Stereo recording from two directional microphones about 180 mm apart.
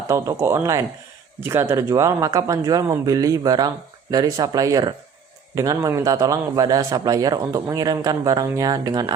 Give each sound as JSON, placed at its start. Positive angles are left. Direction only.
{"t": 0.1, "sound": "a man's voice", "side_deg": -15}